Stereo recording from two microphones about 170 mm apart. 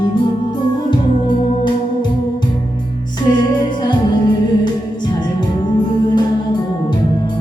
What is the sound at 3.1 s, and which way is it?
Music, 25° left (ahead or behind).